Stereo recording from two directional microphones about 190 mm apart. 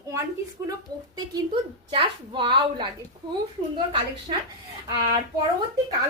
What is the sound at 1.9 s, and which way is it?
Speech, 25° right (ahead or behind).